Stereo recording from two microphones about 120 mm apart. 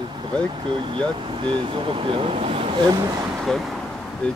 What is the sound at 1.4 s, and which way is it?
Speech, 45° right (ahead or behind).